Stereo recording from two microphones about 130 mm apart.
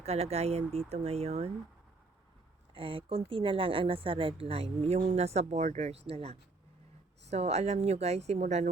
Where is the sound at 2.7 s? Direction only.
40° right (ahead or behind).